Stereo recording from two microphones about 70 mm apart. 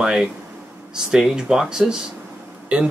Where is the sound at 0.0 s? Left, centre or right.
Centre.